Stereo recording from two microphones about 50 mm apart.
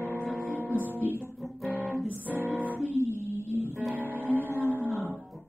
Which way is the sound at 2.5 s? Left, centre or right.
Right.